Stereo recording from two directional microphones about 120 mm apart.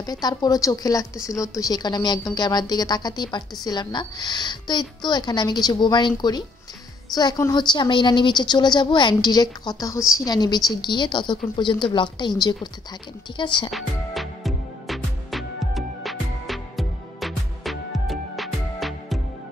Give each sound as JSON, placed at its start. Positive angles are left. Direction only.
{"t": 0.0, "sound": "a woman's voice", "side_deg": 35}
{"t": 13.7, "sound": "music", "side_deg": 0}